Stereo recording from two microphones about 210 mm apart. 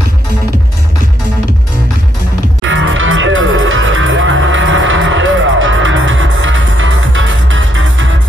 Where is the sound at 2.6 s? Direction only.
65° right (ahead or behind).